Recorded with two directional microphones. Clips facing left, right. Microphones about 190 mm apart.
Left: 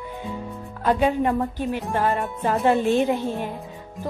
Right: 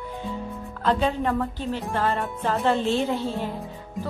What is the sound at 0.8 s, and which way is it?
Speech, 15° left (ahead or behind).